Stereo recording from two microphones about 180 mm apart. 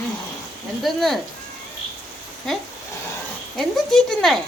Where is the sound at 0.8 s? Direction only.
Centre (ahead or behind).